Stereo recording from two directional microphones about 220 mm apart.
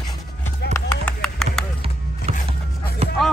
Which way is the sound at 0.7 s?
5° left (ahead or behind).